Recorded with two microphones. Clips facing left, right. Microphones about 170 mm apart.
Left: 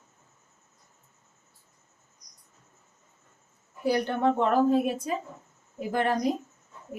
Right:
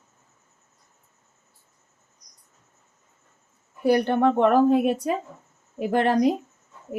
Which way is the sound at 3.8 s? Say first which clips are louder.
Right 5 dB; 60° right (ahead or behind).